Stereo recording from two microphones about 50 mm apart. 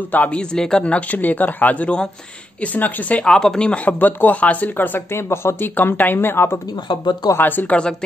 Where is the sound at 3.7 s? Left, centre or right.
Left.